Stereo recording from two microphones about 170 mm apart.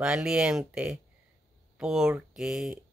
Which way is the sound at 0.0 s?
5° right (ahead or behind).